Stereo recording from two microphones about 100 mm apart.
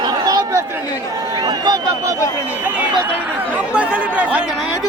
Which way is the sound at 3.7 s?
10° right (ahead or behind).